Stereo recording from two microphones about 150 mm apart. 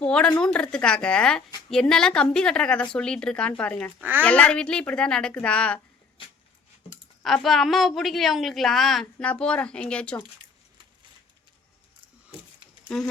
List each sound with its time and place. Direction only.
0.0 s a woman's voice: 5° left (ahead or behind)
6.8 s a sound: 40° left (ahead or behind)
7.2 s a woman's voice: 5° left (ahead or behind)
12.9 s a woman's voice: 5° left (ahead or behind)